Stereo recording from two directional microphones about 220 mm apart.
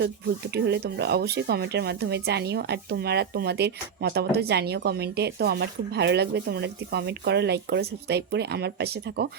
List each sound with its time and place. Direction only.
0.5 s speech: 50° right (ahead or behind)